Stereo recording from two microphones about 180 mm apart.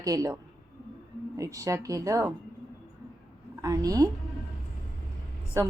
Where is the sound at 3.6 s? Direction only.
20° right (ahead or behind).